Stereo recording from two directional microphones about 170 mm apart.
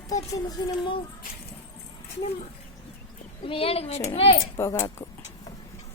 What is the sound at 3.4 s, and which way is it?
Speech, 30° left (ahead or behind).